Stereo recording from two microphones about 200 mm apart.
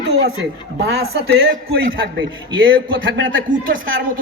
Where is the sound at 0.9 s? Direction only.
55° right (ahead or behind).